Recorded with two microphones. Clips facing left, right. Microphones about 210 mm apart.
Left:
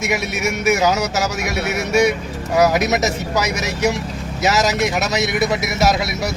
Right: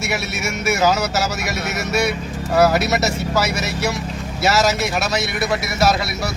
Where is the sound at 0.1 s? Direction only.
15° left (ahead or behind).